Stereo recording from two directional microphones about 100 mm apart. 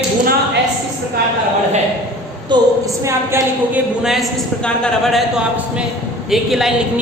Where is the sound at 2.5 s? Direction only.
50° right (ahead or behind).